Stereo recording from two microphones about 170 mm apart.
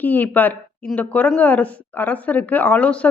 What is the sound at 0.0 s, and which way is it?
A woman's voice, 10° left (ahead or behind).